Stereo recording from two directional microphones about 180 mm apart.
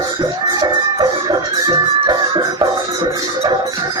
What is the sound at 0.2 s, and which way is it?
Music, 20° right (ahead or behind).